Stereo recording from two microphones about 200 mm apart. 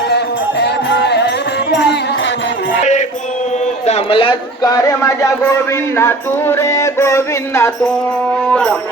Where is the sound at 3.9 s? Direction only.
30° left (ahead or behind).